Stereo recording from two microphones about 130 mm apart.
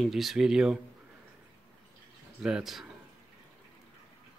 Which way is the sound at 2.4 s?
5° right (ahead or behind).